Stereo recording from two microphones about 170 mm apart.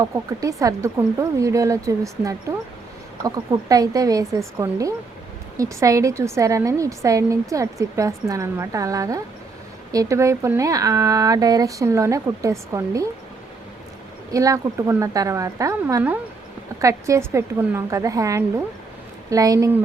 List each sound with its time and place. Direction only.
0.0 s a woman's voice: 20° right (ahead or behind)
14.3 s a woman's voice: 20° right (ahead or behind)